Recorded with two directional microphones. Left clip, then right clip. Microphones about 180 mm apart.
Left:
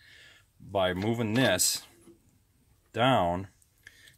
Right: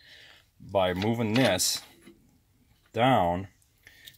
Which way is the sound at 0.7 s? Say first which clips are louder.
Right 2 dB; 10° right (ahead or behind).